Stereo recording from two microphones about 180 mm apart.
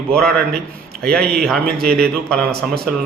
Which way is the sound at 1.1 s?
5° left (ahead or behind).